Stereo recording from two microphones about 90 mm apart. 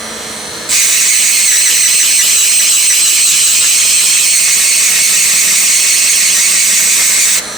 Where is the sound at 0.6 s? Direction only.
Centre (ahead or behind).